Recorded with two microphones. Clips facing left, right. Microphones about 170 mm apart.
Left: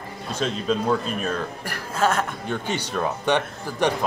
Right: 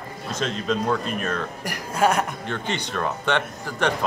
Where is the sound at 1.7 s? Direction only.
10° right (ahead or behind).